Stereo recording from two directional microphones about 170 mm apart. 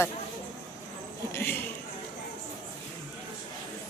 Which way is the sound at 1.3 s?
10° left (ahead or behind).